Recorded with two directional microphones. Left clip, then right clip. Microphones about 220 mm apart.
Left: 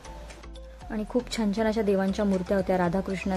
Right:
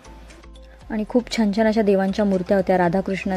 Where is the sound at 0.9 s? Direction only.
15° right (ahead or behind).